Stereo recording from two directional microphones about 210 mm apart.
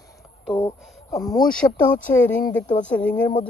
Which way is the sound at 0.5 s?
15° left (ahead or behind).